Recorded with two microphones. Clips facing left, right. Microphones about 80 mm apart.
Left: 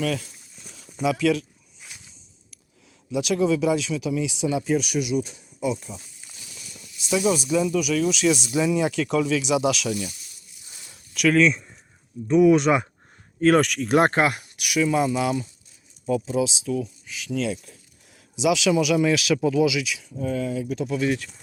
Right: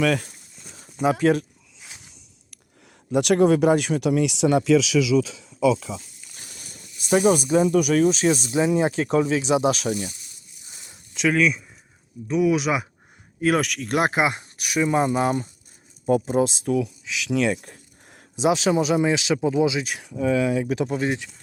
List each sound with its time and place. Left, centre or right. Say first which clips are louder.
0.0 s speech: right 5 dB; right
0.6 s a sound: right 2 dB; right
1.0 s speech: right 2 dB; right
2.0 s walk: right 2 dB; right
3.1 s speech: right 4 dB; right
6.3 s speech: right 1 dB; right
10.7 s a sound: right 1 dB; right
11.3 s speech: left 2 dB; centre
14.2 s speech: left 1 dB; centre
14.6 s speech: even; right
17.0 s a sound: right 5 dB; right
18.4 s speech: even; right
20.0 s speech: right 5 dB; right
20.9 s speech: left 4 dB; right